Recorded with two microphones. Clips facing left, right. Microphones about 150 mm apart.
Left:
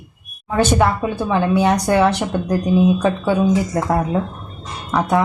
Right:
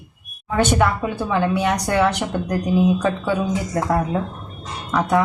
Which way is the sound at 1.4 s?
30° left (ahead or behind).